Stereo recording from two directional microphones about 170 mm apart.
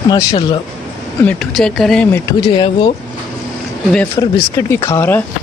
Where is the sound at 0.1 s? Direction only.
30° left (ahead or behind).